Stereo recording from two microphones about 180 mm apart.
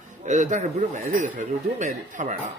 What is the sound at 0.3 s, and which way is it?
Speech, 40° right (ahead or behind).